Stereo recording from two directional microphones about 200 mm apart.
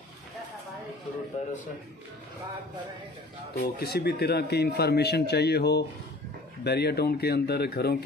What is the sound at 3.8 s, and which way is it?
Speech, 55° left (ahead or behind).